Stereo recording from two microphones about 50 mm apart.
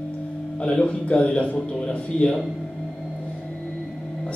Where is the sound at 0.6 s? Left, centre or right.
Left.